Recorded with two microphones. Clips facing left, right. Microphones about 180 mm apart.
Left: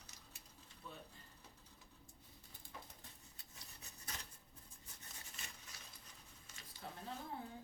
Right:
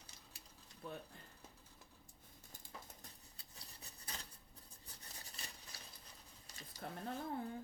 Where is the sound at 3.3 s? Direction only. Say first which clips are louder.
Right 1 dB; 35° right (ahead or behind).